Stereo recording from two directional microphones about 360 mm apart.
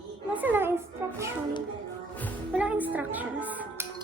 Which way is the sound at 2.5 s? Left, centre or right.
Centre.